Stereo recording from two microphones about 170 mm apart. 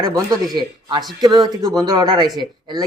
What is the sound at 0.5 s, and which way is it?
Speech, 25° right (ahead or behind).